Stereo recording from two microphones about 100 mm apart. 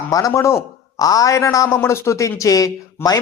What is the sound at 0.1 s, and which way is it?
A man's voice, 35° left (ahead or behind).